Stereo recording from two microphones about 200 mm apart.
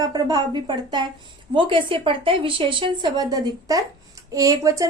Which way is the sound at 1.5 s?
25° right (ahead or behind).